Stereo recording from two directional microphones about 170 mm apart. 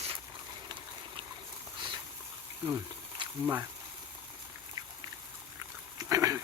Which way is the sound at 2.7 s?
20° right (ahead or behind).